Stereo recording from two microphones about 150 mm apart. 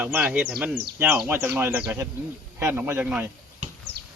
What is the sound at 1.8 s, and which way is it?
Speech, 20° right (ahead or behind).